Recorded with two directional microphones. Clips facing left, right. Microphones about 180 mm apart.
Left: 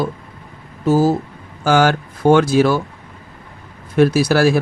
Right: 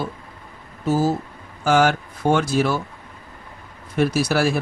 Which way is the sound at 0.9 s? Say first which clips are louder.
Left 5 dB; 90° left.